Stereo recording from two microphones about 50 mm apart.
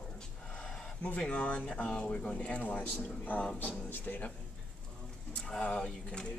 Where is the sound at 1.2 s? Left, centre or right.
Left.